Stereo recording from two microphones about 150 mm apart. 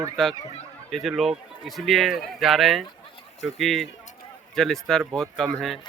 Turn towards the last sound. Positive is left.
turn(degrees=0)  # may be behind; listen again after turning